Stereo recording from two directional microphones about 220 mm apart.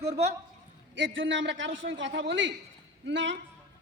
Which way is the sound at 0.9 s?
60° right (ahead or behind).